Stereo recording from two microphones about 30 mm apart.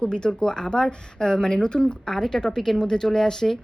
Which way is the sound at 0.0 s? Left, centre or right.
Left.